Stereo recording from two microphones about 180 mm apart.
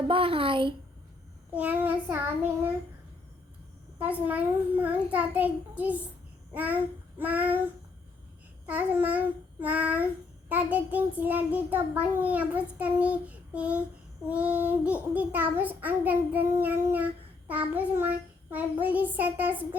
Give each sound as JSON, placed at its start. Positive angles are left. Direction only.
{"t": 0.1, "sound": "speech", "side_deg": -30}
{"t": 1.5, "sound": "child singing", "side_deg": -10}
{"t": 4.0, "sound": "child singing", "side_deg": -10}
{"t": 6.5, "sound": "babbling", "side_deg": -10}
{"t": 7.2, "sound": "child singing", "side_deg": -10}
{"t": 8.6, "sound": "child singing", "side_deg": -10}